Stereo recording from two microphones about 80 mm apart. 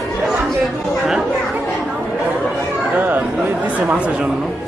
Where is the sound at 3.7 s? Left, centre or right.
Centre.